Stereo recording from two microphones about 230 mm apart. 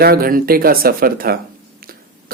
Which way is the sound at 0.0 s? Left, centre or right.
Right.